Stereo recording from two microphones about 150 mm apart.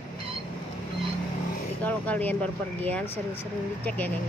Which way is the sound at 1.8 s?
10° left (ahead or behind).